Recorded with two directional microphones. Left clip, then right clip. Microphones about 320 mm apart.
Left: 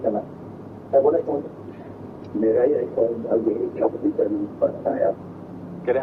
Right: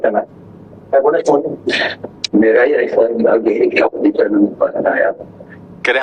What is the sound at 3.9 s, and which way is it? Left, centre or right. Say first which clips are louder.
A man's voice: right 8 dB; right.